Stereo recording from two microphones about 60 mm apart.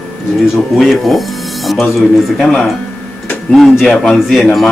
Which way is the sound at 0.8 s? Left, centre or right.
Centre.